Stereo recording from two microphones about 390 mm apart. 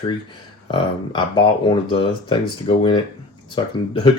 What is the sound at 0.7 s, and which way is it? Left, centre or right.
Speech, centre.